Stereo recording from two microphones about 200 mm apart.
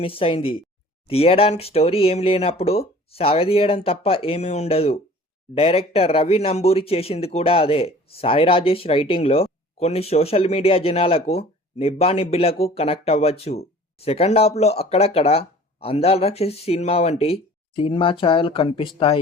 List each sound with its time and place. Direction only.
0.0 s speech: 25° left (ahead or behind)